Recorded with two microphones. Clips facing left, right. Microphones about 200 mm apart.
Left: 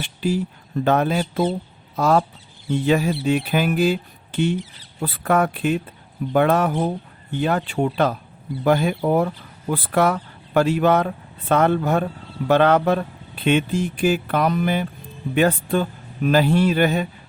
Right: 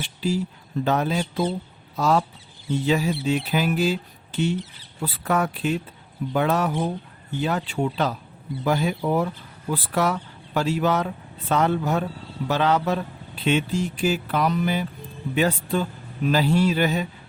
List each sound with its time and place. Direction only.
0.0 s speech: 55° left (ahead or behind)